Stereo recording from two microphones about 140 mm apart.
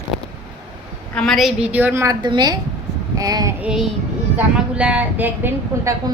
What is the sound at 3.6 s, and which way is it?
A woman's voice, 5° right (ahead or behind).